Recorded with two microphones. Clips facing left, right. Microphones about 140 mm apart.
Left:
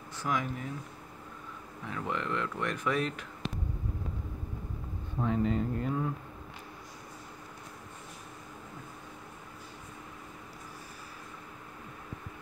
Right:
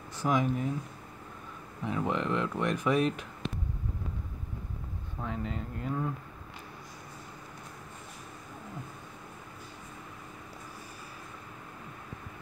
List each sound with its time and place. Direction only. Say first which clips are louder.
0.2 s speech: right 5 dB; 20° right (ahead or behind)
1.9 s speech: right 4 dB; 20° right (ahead or behind)
5.2 s speech: left 7 dB; centre (ahead or behind)